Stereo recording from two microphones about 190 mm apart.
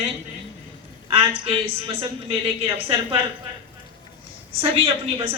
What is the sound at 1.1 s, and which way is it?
A woman's voice, 30° right (ahead or behind).